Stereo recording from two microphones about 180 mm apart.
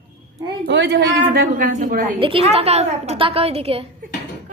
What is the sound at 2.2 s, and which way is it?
A woman's voice, 30° right (ahead or behind).